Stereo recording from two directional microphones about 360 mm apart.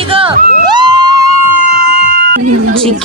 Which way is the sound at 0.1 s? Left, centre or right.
Centre.